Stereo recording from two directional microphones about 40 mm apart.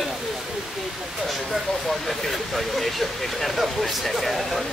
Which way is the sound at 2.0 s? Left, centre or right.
Centre.